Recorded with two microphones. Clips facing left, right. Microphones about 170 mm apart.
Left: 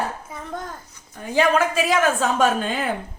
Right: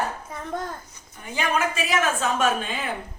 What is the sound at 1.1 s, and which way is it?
Speech, 90° left.